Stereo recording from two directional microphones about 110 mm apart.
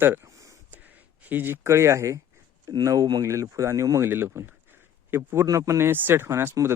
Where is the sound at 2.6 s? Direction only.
30° right (ahead or behind).